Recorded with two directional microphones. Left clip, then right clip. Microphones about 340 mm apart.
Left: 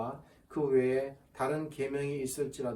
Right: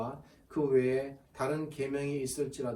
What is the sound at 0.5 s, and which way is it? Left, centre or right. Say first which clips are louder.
Speech: even; centre.